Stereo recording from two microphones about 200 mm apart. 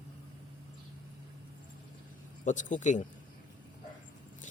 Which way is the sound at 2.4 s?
40° left (ahead or behind).